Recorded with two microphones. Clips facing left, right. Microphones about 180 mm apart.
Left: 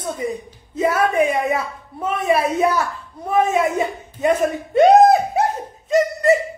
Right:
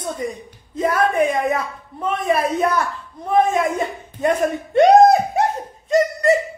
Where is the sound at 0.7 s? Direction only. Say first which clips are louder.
Left 1 dB; 5° left (ahead or behind).